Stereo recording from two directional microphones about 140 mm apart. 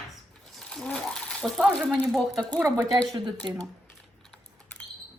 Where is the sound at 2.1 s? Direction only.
Centre (ahead or behind).